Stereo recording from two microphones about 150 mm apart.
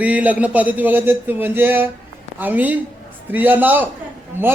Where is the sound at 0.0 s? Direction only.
10° right (ahead or behind).